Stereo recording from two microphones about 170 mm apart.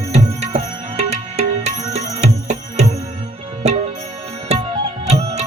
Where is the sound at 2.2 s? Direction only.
40° right (ahead or behind).